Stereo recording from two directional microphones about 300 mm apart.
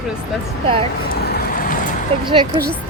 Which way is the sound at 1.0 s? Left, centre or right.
Left.